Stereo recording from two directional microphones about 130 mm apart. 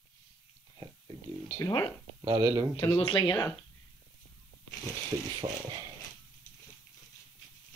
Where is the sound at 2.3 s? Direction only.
20° right (ahead or behind).